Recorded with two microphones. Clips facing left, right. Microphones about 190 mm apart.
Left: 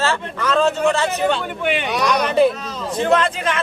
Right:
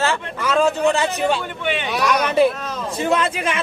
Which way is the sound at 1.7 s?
Centre (ahead or behind).